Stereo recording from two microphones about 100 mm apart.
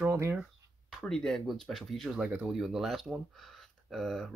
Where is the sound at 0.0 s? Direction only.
25° right (ahead or behind).